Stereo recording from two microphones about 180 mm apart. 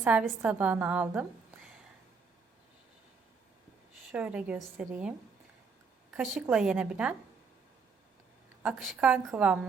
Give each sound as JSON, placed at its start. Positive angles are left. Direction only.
{"t": 0.0, "sound": "a woman's voice", "side_deg": -10}
{"t": 4.1, "sound": "a woman's voice", "side_deg": -5}
{"t": 6.1, "sound": "a woman's voice", "side_deg": -5}
{"t": 8.6, "sound": "a woman's voice", "side_deg": -5}